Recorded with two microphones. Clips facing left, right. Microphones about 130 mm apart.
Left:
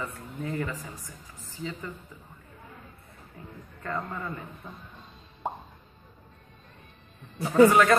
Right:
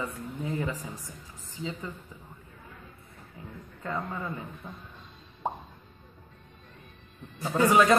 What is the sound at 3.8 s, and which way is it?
Speech, 10° right (ahead or behind).